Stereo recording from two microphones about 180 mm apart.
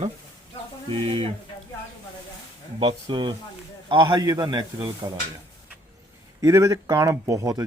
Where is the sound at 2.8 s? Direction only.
25° right (ahead or behind).